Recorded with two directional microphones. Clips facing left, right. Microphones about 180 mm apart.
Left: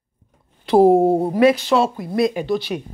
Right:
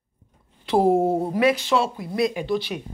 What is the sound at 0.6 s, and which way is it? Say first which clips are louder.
Speech: left 6 dB; 40° left (ahead or behind).